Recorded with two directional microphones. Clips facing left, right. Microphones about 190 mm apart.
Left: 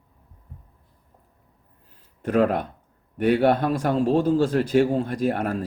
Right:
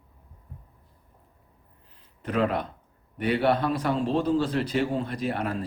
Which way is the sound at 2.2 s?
45° left (ahead or behind).